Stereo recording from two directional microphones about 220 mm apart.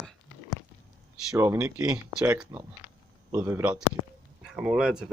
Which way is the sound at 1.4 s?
10° right (ahead or behind).